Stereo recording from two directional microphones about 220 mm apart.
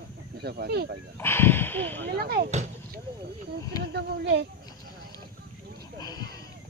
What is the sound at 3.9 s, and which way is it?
Speech, 50° right (ahead or behind).